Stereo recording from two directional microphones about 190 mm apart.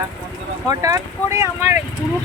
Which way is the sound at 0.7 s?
20° right (ahead or behind).